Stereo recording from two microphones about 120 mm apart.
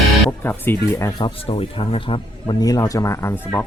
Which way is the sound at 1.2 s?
55° left (ahead or behind).